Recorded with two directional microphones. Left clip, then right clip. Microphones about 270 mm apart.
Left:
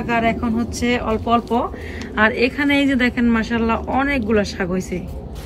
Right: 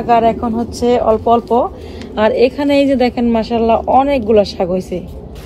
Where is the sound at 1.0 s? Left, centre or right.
Centre.